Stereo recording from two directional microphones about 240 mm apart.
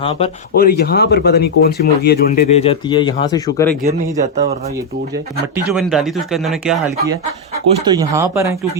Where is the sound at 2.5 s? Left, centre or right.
Left.